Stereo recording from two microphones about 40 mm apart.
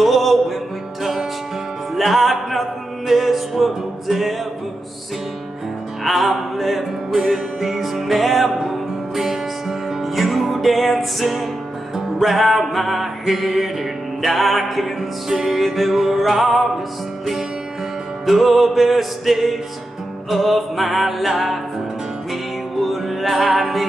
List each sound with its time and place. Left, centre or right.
0.0 s music: centre
2.0 s music: centre
6.0 s music: centre
18.2 s music: centre
22.8 s music: centre